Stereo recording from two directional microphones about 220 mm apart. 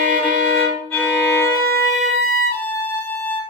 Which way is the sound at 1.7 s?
45° right (ahead or behind).